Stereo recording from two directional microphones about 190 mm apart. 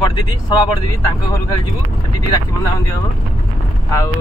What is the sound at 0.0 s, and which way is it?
Speech, 20° left (ahead or behind).